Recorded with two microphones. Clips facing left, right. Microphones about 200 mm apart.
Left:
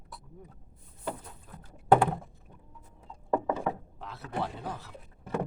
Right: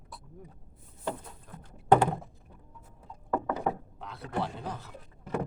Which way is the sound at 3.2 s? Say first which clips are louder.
Left 2 dB; 25° left (ahead or behind).